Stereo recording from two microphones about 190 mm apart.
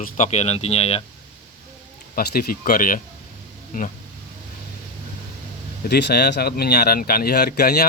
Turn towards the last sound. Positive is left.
turn(degrees=55)  # may be behind; listen again after turning